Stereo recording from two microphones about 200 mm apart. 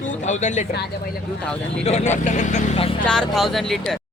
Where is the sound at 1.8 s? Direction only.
35° left (ahead or behind).